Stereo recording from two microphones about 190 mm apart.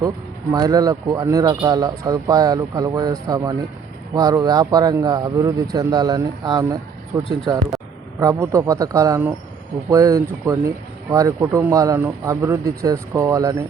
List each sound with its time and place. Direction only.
0.5 s speech: 20° right (ahead or behind)